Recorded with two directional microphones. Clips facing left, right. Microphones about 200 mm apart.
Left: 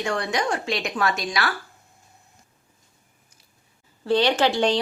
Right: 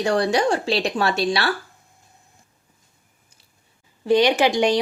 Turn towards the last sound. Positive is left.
turn(degrees=-10)  # may be behind; listen again after turning